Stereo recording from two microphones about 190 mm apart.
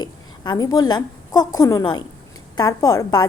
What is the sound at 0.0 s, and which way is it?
A woman's voice, 20° left (ahead or behind).